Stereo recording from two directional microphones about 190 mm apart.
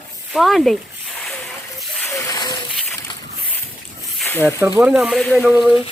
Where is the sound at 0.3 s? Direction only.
Centre (ahead or behind).